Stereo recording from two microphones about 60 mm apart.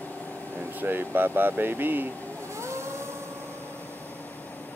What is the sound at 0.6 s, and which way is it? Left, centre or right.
Speech, right.